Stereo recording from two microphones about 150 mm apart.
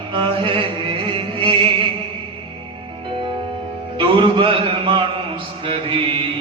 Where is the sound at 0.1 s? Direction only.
35° right (ahead or behind).